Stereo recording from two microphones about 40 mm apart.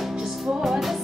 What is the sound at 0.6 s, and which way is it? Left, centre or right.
Music, centre.